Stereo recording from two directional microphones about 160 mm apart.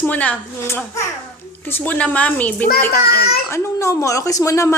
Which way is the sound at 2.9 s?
75° left (ahead or behind).